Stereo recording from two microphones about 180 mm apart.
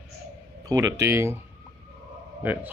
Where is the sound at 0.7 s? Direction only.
20° right (ahead or behind).